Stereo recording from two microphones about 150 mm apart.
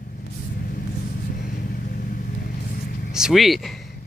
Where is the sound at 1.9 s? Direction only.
70° left (ahead or behind).